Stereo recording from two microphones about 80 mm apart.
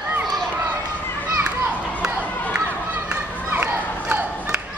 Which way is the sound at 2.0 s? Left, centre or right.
Centre.